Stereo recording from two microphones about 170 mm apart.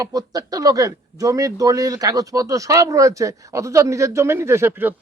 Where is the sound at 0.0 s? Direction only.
20° right (ahead or behind).